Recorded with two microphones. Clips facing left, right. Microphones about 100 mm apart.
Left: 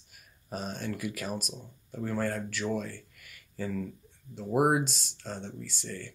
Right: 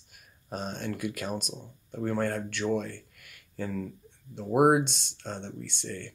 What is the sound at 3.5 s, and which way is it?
Speech, 25° right (ahead or behind).